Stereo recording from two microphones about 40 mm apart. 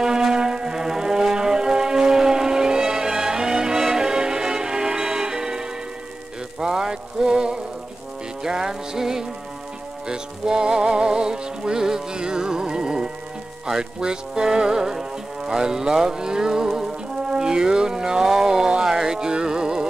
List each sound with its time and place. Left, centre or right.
0.0 s music: centre